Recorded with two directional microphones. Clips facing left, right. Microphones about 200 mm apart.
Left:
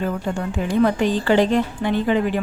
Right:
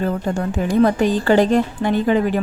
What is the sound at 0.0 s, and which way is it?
A woman's voice, 40° right (ahead or behind).